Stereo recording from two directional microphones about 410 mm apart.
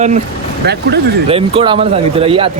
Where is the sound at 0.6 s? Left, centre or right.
Right.